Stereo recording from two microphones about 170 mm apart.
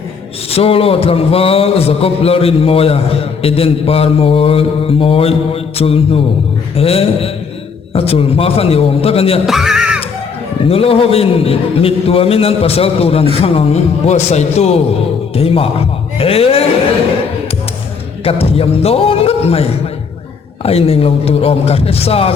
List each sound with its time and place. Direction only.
0.5 s a man's voice: 35° left (ahead or behind)
9.5 s music: centre (ahead or behind)
10.7 s a man's voice: 35° left (ahead or behind)
18.3 s a man's voice: 35° left (ahead or behind)